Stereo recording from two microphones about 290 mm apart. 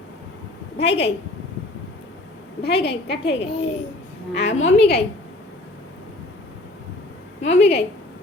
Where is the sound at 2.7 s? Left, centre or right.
Left.